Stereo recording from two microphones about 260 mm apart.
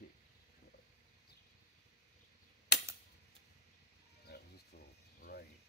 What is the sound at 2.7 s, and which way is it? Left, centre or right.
Typewriter, left.